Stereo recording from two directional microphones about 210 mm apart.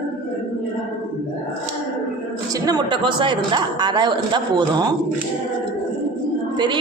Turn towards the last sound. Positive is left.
turn(degrees=-20)  # may be behind; listen again after turning